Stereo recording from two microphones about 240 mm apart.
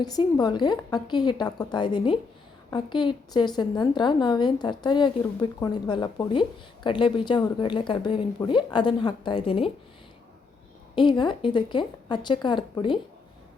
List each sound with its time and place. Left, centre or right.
0.0 s a woman's voice: centre
10.9 s a woman's voice: centre